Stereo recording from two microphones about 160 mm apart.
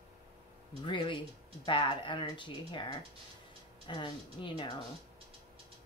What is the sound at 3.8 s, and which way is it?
Speech, 30° left (ahead or behind).